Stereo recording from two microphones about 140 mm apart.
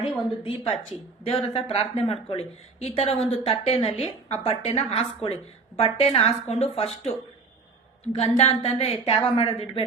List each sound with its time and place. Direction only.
0.0 s speech: 40° left (ahead or behind)
8.0 s speech: 50° left (ahead or behind)